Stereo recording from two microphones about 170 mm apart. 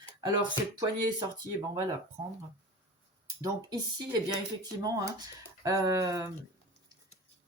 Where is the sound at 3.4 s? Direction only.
25° right (ahead or behind).